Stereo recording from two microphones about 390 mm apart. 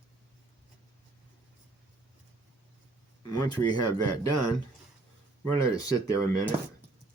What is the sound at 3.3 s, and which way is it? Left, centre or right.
Speech, centre.